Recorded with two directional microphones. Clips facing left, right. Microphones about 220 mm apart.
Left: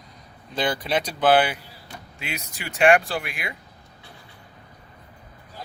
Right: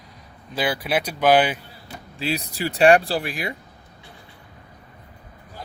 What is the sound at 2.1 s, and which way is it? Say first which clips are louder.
Speech: right 9 dB; 35° right (ahead or behind).